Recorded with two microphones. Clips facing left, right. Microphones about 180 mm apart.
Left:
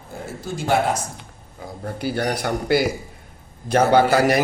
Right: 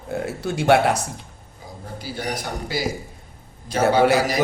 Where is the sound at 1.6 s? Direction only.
65° left (ahead or behind).